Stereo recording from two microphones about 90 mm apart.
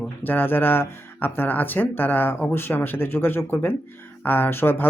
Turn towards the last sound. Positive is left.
turn(degrees=25)  # may be behind; listen again after turning